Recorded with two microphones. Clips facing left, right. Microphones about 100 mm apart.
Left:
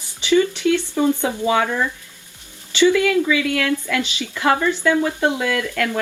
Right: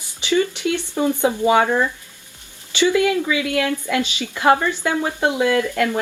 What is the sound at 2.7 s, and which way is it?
Speech, 20° right (ahead or behind).